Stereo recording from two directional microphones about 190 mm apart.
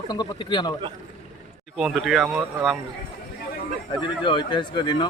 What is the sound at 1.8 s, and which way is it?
Speech, centre (ahead or behind).